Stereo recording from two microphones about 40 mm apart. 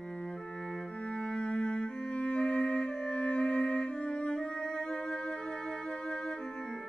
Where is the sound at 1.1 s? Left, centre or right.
Left.